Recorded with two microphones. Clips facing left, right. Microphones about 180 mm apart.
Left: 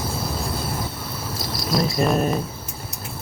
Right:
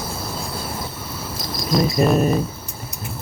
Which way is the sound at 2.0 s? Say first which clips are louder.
Right 3 dB; 5° right (ahead or behind).